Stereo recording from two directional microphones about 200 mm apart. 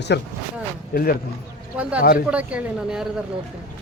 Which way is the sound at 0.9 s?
45° left (ahead or behind).